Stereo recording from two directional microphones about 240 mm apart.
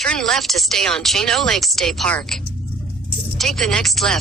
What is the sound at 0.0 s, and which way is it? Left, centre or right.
Speech, centre.